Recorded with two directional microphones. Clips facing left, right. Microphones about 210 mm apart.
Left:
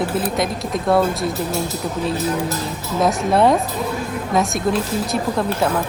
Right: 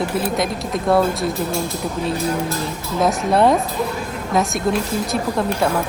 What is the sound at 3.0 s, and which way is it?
Speech, centre (ahead or behind).